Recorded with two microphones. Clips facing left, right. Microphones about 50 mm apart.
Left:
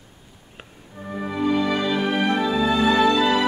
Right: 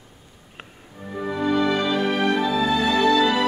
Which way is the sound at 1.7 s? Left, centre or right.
Centre.